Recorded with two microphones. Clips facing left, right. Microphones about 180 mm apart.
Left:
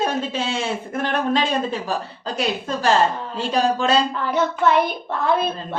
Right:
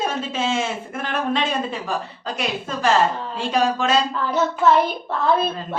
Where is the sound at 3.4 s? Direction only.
35° left (ahead or behind).